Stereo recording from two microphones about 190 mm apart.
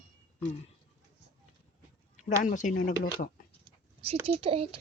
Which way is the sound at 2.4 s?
45° left (ahead or behind).